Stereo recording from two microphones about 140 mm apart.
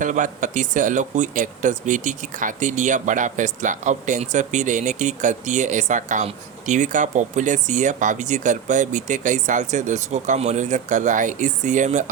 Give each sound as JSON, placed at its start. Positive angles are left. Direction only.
{"t": 0.0, "sound": "speech", "side_deg": -65}